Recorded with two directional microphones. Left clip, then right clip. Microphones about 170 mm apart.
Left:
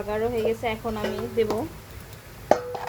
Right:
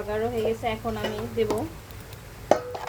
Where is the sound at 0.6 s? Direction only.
45° left (ahead or behind).